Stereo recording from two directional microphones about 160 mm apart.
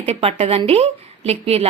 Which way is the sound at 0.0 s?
40° right (ahead or behind).